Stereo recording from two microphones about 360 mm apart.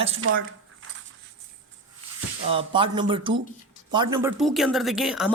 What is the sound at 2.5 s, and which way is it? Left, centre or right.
Speech, centre.